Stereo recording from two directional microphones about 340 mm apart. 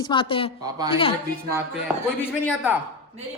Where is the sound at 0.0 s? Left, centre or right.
Centre.